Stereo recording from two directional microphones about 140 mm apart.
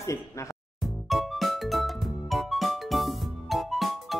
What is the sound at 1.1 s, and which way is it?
Music, centre (ahead or behind).